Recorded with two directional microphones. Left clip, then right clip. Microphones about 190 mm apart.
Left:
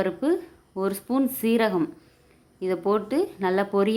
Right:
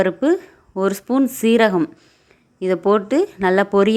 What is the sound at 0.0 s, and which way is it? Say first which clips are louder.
A woman's voice: right 7 dB; 30° right (ahead or behind).